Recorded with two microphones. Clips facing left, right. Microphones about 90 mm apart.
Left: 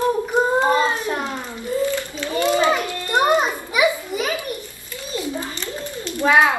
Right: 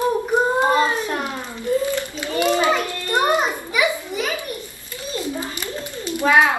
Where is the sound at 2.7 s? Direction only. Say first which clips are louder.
Even; 20° left (ahead or behind).